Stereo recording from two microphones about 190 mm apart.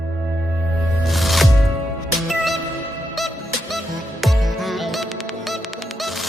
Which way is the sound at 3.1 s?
Centre (ahead or behind).